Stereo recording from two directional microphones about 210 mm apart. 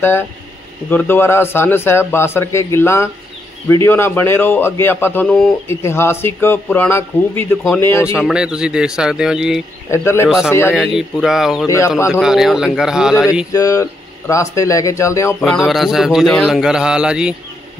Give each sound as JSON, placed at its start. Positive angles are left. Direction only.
{"t": 0.8, "sound": "a man's voice", "side_deg": 10}
{"t": 8.2, "sound": "speech", "side_deg": -5}
{"t": 9.8, "sound": "a man's voice", "side_deg": 10}
{"t": 10.2, "sound": "speech", "side_deg": 0}
{"t": 11.6, "sound": "a man's voice", "side_deg": 15}
{"t": 12.1, "sound": "speech", "side_deg": 0}
{"t": 13.5, "sound": "a man's voice", "side_deg": 15}
{"t": 15.4, "sound": "speech", "side_deg": 0}